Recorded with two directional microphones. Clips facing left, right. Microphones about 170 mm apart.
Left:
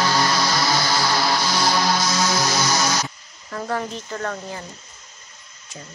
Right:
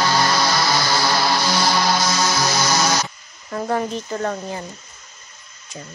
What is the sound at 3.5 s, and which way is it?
Speech, 25° right (ahead or behind).